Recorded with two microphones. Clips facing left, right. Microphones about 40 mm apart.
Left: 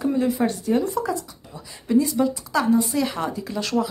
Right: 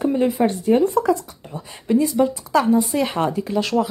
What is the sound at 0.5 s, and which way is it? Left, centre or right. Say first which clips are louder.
Speech: right 5 dB; right.